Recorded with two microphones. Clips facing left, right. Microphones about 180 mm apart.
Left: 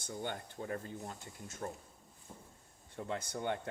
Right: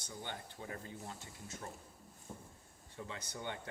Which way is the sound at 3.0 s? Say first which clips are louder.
Left 7 dB; 55° left (ahead or behind).